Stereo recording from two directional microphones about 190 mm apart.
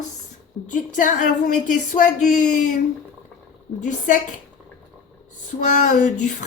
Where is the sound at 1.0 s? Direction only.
45° left (ahead or behind).